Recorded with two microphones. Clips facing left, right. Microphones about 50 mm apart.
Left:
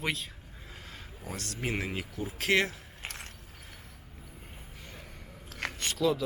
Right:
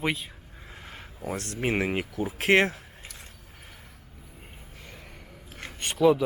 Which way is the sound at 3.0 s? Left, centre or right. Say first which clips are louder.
Left 8 dB; left.